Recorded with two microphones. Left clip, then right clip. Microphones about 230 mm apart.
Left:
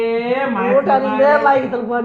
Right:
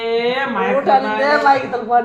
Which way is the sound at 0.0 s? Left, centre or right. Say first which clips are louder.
Even; right.